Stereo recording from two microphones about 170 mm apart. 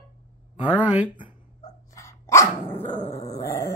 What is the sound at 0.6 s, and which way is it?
Speech, 10° right (ahead or behind).